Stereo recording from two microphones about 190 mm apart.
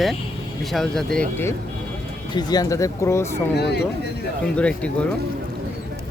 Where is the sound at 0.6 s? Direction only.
Centre (ahead or behind).